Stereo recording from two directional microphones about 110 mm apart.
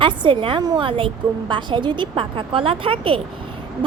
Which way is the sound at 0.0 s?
50° right (ahead or behind).